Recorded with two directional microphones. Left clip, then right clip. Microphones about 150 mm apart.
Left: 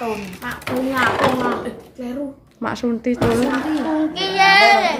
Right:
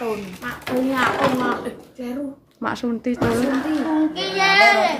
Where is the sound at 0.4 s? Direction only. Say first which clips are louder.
Left 2 dB; 15° left (ahead or behind).